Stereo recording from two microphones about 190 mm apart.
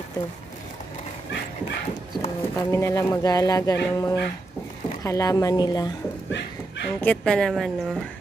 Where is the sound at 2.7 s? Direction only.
15° left (ahead or behind).